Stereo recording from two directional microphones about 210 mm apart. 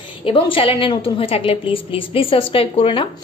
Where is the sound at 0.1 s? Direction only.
25° left (ahead or behind).